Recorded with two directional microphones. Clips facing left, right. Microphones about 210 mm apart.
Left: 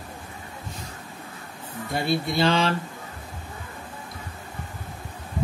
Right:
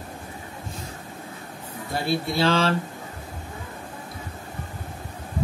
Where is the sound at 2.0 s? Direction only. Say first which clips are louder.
Even; centre (ahead or behind).